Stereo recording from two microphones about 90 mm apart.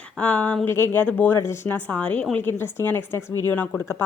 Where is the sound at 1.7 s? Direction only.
15° left (ahead or behind).